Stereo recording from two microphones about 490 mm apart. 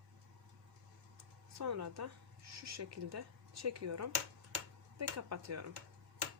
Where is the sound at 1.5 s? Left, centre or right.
Right.